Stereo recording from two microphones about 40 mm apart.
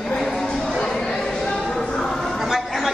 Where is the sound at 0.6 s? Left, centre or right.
Centre.